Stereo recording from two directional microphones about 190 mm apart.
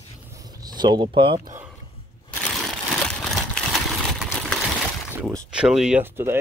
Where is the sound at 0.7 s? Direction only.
20° right (ahead or behind).